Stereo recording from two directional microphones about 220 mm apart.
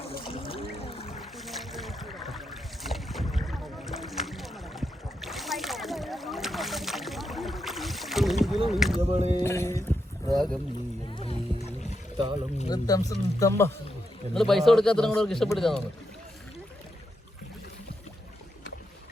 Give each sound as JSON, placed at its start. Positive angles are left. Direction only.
{"t": 0.2, "sound": "music", "side_deg": 25}
{"t": 1.2, "sound": "boat", "side_deg": 0}
{"t": 9.0, "sound": "a sound", "side_deg": -30}
{"t": 9.4, "sound": "boat", "side_deg": 10}
{"t": 10.3, "sound": "a sound", "side_deg": 0}
{"t": 11.1, "sound": "music", "side_deg": 25}
{"t": 12.1, "sound": "speech", "side_deg": -20}
{"t": 12.6, "sound": "speech", "side_deg": 15}
{"t": 14.3, "sound": "speech", "side_deg": 0}